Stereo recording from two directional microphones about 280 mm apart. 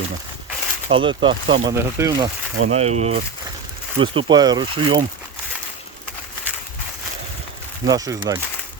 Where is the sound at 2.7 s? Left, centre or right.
Right.